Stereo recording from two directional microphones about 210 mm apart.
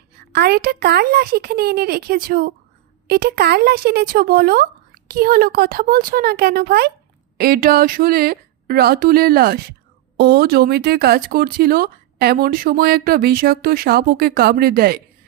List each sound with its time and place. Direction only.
0.3 s speech: 50° right (ahead or behind)